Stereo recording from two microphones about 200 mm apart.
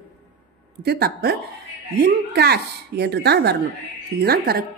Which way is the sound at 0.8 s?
50° right (ahead or behind).